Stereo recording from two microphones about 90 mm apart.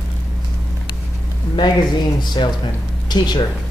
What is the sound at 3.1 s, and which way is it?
Speech, 55° left (ahead or behind).